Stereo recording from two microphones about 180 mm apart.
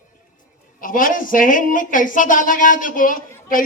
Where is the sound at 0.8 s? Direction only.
50° left (ahead or behind).